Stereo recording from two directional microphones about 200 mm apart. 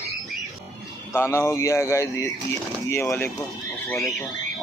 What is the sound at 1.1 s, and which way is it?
Speech, 15° left (ahead or behind).